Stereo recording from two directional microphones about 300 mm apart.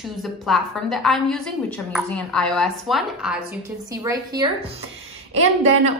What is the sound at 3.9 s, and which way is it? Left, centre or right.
A woman's voice, centre.